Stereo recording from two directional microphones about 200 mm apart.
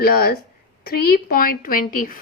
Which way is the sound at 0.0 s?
50° left (ahead or behind).